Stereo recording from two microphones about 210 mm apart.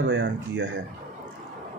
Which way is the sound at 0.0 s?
60° right (ahead or behind).